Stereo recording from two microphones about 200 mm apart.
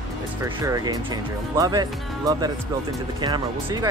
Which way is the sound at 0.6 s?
15° right (ahead or behind).